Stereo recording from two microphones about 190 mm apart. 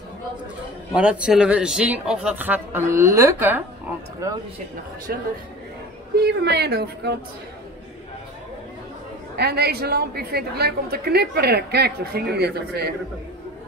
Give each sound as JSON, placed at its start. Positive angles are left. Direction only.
{"t": 0.9, "sound": "speech", "side_deg": -5}
{"t": 5.1, "sound": "a woman's voice", "side_deg": -55}
{"t": 9.4, "sound": "a woman's voice", "side_deg": -55}